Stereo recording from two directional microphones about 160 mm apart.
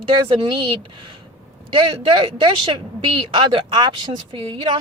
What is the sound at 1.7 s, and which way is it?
A woman's voice, 35° right (ahead or behind).